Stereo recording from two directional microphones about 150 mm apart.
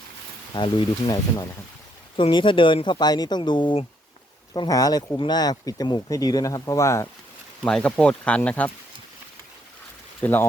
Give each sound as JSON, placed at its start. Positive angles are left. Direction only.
{"t": 0.5, "sound": "speech", "side_deg": 30}
{"t": 7.6, "sound": "speech", "side_deg": 5}
{"t": 10.2, "sound": "speech", "side_deg": 10}